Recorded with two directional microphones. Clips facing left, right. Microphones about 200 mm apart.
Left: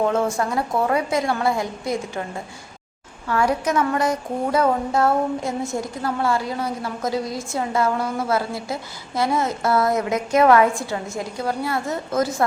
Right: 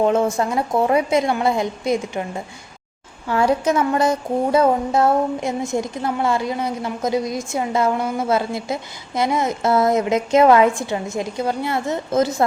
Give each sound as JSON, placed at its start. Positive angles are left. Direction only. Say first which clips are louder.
{"t": 0.0, "sound": "speech", "louder": "right 3 dB", "side_deg": -20}